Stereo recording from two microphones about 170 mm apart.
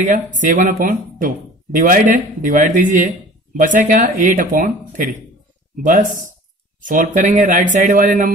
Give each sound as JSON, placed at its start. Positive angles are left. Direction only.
{"t": 0.4, "sound": "speech", "side_deg": -50}